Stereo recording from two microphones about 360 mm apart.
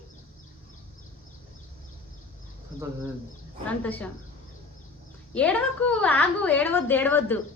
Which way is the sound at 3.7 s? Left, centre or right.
Centre.